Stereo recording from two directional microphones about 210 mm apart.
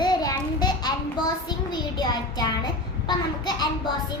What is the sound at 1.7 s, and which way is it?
Child singing, 20° left (ahead or behind).